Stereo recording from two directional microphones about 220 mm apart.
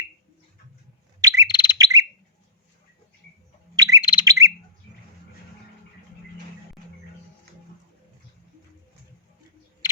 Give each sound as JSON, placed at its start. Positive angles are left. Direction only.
{"t": 1.2, "sound": "bird", "side_deg": -15}
{"t": 1.5, "sound": "bird", "side_deg": 20}
{"t": 1.8, "sound": "bird", "side_deg": -15}
{"t": 3.8, "sound": "bird", "side_deg": -15}
{"t": 4.0, "sound": "bird", "side_deg": 20}
{"t": 4.3, "sound": "bird", "side_deg": -15}